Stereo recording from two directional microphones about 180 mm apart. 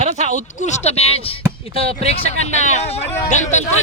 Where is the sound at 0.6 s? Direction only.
40° left (ahead or behind).